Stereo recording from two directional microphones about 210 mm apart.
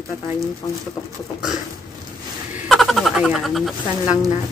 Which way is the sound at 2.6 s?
Centre (ahead or behind).